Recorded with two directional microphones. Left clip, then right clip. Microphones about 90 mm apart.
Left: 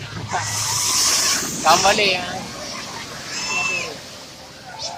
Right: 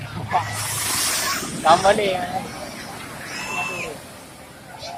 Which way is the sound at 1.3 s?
5° right (ahead or behind).